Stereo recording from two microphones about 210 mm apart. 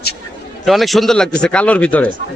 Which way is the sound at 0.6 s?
Centre (ahead or behind).